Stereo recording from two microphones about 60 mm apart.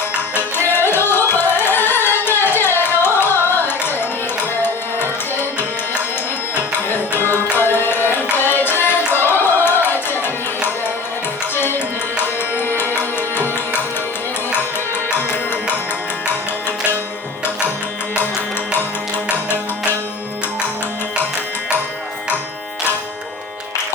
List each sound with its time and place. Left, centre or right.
0.7 s carnatic music: left
4.6 s tabla: left
6.9 s music: left
7.5 s carnatic music: left
11.5 s tabla: left
16.6 s music: left